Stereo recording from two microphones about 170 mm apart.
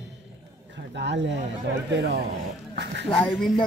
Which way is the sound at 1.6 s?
85° right.